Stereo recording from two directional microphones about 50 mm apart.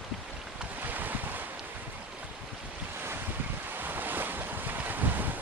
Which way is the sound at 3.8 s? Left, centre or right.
Right.